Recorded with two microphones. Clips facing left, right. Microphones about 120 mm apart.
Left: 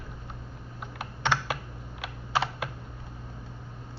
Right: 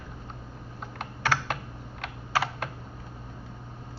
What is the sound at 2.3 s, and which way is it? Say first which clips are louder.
Computer keyboard: even; 25° left (ahead or behind).